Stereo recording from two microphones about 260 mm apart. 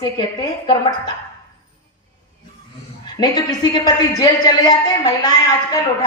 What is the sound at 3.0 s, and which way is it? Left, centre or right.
A woman's voice, centre.